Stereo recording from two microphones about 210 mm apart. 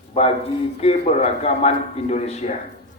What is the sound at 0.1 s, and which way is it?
A man's voice, 30° left (ahead or behind).